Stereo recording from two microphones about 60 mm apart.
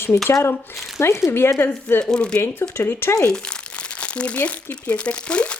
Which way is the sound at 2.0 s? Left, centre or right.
Centre.